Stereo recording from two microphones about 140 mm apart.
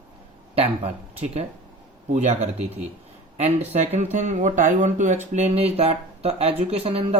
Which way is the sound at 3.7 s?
55° right (ahead or behind).